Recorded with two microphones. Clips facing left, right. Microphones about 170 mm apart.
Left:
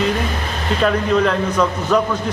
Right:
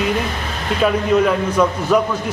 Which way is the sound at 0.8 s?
10° right (ahead or behind).